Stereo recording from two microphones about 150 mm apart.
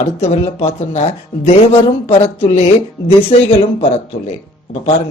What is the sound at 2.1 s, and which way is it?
Speech, 45° left (ahead or behind).